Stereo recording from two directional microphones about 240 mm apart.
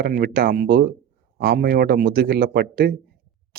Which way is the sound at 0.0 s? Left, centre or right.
Right.